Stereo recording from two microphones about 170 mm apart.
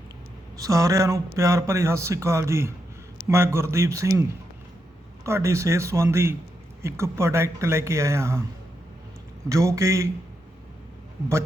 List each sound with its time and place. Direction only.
0.5 s speech: 20° right (ahead or behind)
9.5 s speech: 20° right (ahead or behind)